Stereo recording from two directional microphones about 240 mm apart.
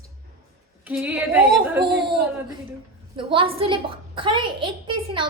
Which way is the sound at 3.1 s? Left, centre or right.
Right.